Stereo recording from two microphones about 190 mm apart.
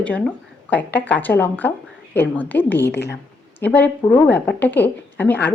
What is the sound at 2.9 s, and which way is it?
Speech, 60° left (ahead or behind).